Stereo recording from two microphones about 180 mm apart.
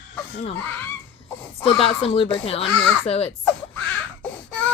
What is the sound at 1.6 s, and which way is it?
Speech, 30° left (ahead or behind).